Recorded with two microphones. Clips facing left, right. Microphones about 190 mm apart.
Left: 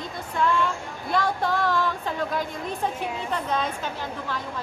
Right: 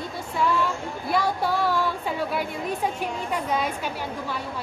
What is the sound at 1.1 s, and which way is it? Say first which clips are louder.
A woman's voice: even; 10° right (ahead or behind).